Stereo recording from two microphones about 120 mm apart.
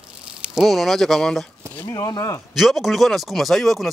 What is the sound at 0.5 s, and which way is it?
Speech, centre (ahead or behind).